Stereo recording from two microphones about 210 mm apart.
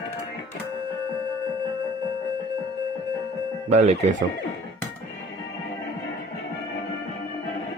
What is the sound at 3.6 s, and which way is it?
Speech, 30° right (ahead or behind).